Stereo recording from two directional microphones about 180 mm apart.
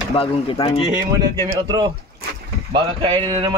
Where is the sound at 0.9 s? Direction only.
25° right (ahead or behind).